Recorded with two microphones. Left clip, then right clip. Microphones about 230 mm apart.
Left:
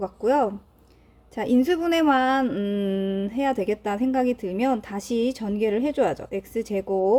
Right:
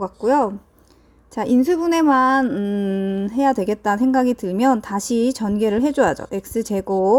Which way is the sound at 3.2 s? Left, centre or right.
Right.